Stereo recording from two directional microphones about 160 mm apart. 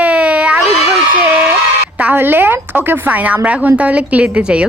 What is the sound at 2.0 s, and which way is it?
A woman's voice, 10° right (ahead or behind).